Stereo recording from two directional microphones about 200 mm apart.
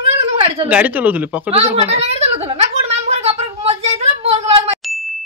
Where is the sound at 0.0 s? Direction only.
30° right (ahead or behind).